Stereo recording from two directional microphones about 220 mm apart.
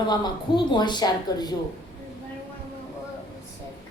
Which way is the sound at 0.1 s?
20° left (ahead or behind).